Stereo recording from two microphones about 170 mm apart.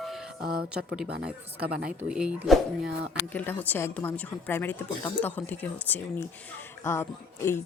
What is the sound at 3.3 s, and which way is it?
Speech, 10° left (ahead or behind).